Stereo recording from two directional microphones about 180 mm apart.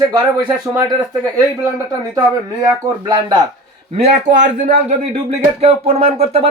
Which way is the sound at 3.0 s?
25° right (ahead or behind).